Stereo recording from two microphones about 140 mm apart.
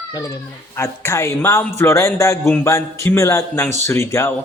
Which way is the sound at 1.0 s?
20° left (ahead or behind).